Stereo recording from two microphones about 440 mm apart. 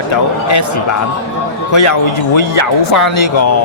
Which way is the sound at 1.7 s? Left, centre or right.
Left.